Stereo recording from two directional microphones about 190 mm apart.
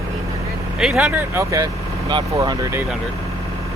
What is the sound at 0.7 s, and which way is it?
Speech, centre (ahead or behind).